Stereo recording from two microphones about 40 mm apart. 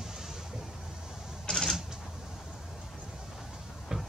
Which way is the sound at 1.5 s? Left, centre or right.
Centre.